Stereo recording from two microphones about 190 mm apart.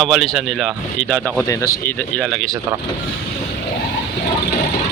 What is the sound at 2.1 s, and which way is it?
Speech, centre (ahead or behind).